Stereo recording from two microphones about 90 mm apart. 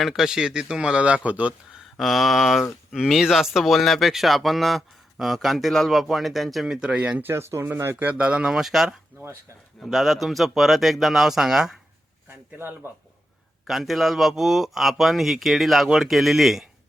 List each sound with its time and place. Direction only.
0.0 s speech: 5° right (ahead or behind)
2.0 s speech: centre (ahead or behind)
12.5 s speech: 25° right (ahead or behind)
13.7 s speech: centre (ahead or behind)